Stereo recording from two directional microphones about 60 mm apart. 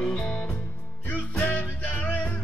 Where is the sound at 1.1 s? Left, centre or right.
Left.